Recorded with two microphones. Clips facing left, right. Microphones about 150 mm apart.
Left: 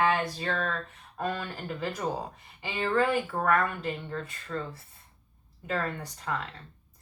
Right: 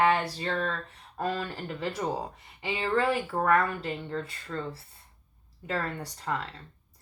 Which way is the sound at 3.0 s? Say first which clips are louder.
Right 1 dB; 30° right (ahead or behind).